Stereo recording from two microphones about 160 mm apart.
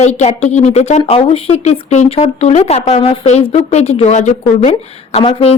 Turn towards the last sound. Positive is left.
turn(degrees=35)  # may be behind; listen again after turning